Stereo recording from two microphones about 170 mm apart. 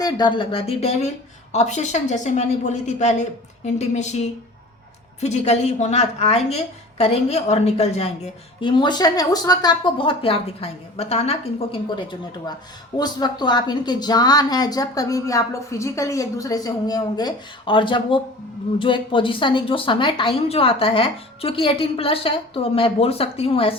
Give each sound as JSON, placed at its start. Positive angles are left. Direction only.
{"t": 0.0, "sound": "a woman's voice", "side_deg": 25}
{"t": 13.0, "sound": "a woman's voice", "side_deg": 25}